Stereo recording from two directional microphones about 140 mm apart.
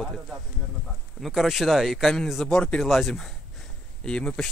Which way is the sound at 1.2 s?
Centre (ahead or behind).